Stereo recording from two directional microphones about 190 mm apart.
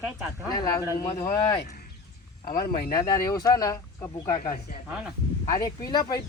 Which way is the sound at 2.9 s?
20° left (ahead or behind).